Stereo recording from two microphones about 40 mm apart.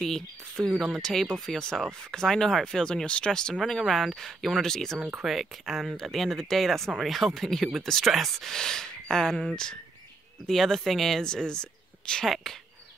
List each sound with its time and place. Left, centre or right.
0.0 s speech: centre
5.2 s speech: centre
8.5 s speech: centre
11.2 s speech: centre